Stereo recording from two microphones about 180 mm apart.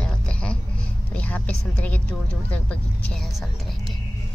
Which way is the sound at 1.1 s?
10° left (ahead or behind).